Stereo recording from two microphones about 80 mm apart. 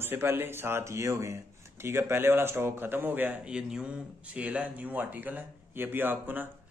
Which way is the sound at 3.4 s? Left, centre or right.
Centre.